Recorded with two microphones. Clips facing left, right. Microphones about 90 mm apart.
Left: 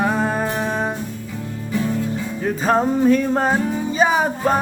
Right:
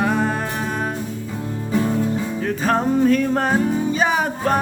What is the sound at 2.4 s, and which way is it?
Music, 10° left (ahead or behind).